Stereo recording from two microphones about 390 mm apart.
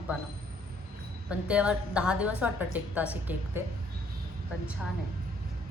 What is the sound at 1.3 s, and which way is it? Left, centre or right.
A woman's voice, centre.